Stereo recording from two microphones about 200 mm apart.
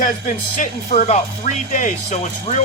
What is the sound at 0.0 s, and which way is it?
Speech, 40° left (ahead or behind).